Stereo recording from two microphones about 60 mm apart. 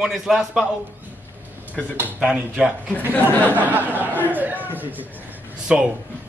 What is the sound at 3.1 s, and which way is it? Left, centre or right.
Speech, left.